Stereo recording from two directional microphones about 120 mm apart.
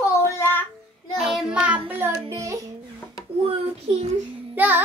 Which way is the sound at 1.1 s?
5° right (ahead or behind).